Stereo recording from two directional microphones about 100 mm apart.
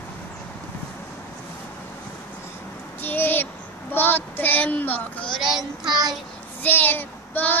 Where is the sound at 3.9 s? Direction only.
20° left (ahead or behind).